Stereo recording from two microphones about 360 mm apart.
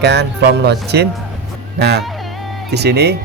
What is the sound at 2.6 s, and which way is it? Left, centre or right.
Speech, right.